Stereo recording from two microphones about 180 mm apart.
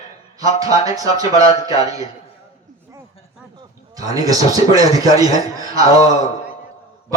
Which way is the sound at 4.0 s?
20° right (ahead or behind).